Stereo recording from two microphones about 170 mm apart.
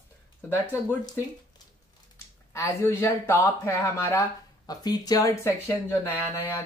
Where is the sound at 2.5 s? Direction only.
15° left (ahead or behind).